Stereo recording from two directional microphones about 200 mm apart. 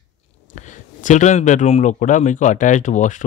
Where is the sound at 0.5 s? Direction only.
40° left (ahead or behind).